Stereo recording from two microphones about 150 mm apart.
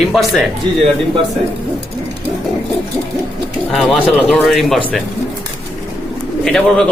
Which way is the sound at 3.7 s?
Centre (ahead or behind).